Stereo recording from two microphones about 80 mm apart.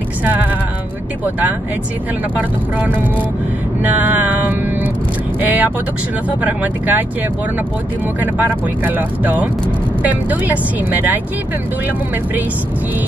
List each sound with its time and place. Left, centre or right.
0.2 s a sound: right
2.3 s speech: right
3.8 s vehicle: right
5.4 s speech: right
8.2 s speech: right